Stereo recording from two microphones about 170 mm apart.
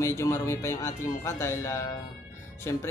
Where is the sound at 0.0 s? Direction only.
15° left (ahead or behind).